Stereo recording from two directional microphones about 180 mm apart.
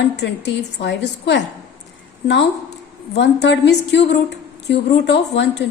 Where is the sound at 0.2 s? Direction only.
70° left (ahead or behind).